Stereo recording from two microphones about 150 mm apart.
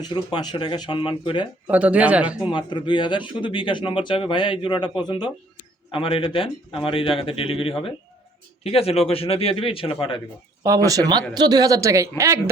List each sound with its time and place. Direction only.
0.0 s speech: 30° left (ahead or behind)
1.6 s speech: 10° right (ahead or behind)
2.5 s speech: 30° left (ahead or behind)
10.6 s a woman's voice: 20° right (ahead or behind)